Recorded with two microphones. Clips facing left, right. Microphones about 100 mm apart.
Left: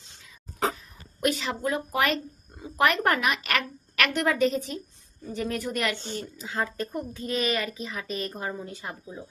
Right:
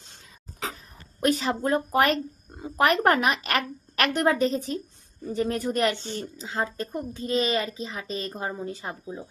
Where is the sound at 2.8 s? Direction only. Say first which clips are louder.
Right 2 dB; 35° right (ahead or behind).